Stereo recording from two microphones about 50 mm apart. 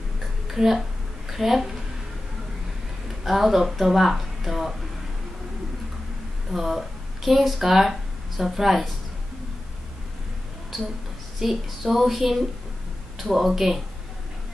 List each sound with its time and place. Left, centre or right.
0.5 s a sound: centre
3.3 s speech: centre
6.5 s speech: centre
11.3 s speech: centre